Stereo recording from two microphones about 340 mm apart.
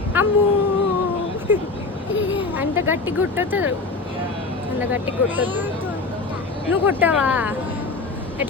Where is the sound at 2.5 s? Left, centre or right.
Centre.